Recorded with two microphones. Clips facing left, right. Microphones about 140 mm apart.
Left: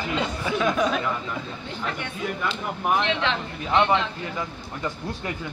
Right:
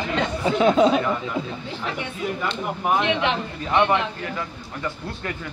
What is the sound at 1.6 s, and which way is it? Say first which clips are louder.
Speech: right 2 dB; 5° right (ahead or behind).